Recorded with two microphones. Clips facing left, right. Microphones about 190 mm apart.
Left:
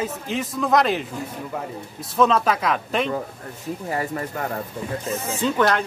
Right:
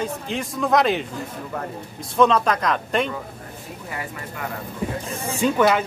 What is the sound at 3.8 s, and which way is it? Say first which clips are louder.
Speech: left 7 dB; 40° left (ahead or behind).